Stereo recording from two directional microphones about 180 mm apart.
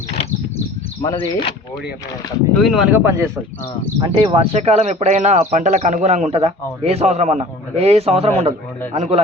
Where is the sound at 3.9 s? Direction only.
25° right (ahead or behind).